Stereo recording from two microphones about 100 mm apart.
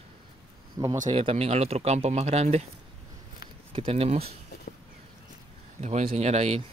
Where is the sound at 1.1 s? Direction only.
75° right (ahead or behind).